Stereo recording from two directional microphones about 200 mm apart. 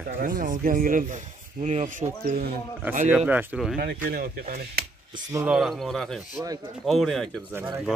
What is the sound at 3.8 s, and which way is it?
Speech, 50° right (ahead or behind).